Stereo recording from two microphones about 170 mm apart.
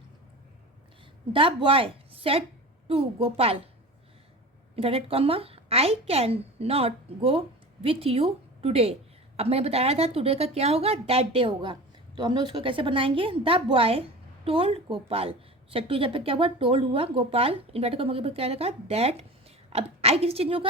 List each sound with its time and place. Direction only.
1.3 s a woman's voice: 30° right (ahead or behind)
4.7 s a woman's voice: 35° right (ahead or behind)